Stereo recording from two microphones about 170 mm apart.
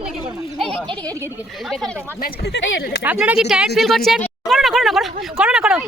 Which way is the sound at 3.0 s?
5° right (ahead or behind).